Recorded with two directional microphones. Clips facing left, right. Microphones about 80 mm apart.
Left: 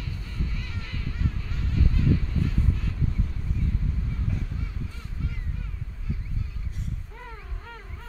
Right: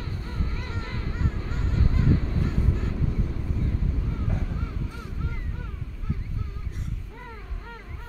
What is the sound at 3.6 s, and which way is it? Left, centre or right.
Vehicle, right.